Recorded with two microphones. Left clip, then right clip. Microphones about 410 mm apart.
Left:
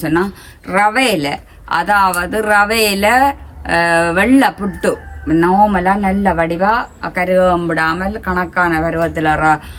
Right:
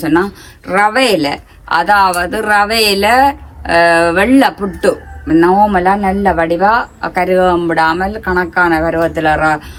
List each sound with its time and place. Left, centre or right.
0.0 s speech: centre